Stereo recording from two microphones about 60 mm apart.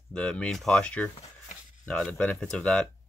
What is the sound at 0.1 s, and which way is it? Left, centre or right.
Speech, centre.